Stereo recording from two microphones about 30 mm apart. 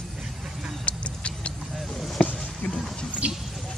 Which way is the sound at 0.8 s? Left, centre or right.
Left.